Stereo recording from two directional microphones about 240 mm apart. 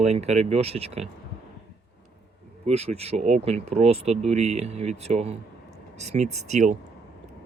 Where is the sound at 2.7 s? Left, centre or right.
Right.